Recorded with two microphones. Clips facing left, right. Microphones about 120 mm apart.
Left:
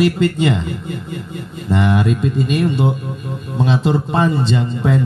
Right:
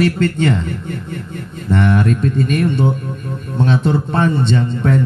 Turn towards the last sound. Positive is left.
turn(degrees=10)  # may be behind; listen again after turning